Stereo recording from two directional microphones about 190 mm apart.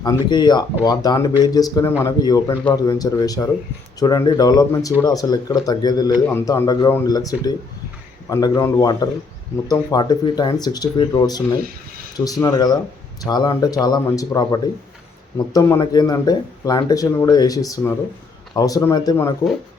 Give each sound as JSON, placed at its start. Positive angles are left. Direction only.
{"t": 0.3, "sound": "speech", "side_deg": 20}
{"t": 11.6, "sound": "speech", "side_deg": -50}
{"t": 12.1, "sound": "speech", "side_deg": 20}